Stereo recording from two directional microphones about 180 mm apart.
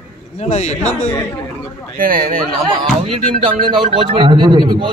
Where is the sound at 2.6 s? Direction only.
25° right (ahead or behind).